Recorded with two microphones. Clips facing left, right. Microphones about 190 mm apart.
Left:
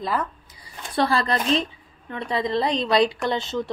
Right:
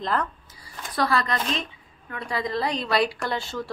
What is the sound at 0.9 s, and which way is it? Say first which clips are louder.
A woman's voice: left 3 dB; 30° left (ahead or behind).